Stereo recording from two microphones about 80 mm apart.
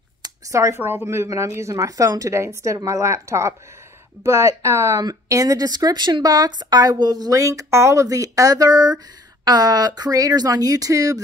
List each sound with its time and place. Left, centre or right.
0.5 s a woman's voice: right